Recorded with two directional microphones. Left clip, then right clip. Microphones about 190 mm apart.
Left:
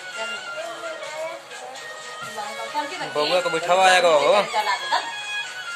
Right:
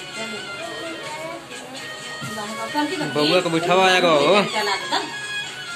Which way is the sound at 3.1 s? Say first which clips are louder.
Right 2 dB; 20° left (ahead or behind).